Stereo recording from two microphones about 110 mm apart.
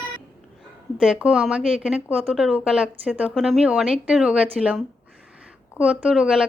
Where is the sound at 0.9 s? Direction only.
5° right (ahead or behind).